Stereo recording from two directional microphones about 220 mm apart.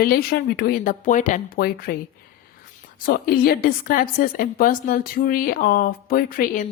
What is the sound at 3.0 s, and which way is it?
A woman's voice, 40° left (ahead or behind).